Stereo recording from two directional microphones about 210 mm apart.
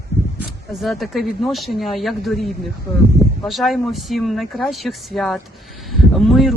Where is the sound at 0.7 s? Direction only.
Centre (ahead or behind).